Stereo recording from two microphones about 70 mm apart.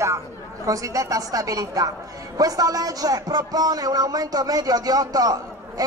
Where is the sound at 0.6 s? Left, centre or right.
Right.